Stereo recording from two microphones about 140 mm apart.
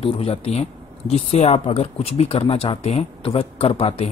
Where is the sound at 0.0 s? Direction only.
45° left (ahead or behind).